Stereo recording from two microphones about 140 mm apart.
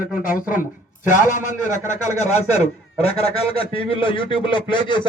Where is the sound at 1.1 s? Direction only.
65° left (ahead or behind).